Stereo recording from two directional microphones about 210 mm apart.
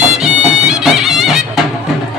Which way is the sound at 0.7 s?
Centre (ahead or behind).